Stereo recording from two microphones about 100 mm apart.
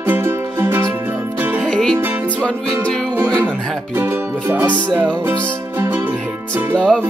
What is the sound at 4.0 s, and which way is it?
Music, 20° right (ahead or behind).